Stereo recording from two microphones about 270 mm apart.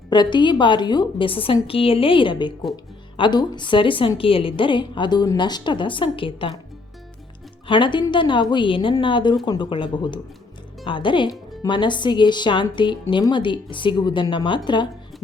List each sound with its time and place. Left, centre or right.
0.1 s speech: centre
7.7 s speech: centre